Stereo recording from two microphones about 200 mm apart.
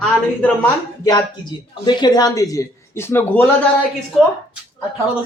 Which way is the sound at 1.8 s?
20° left (ahead or behind).